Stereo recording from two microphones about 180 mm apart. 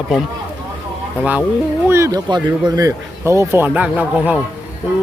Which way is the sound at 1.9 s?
20° right (ahead or behind).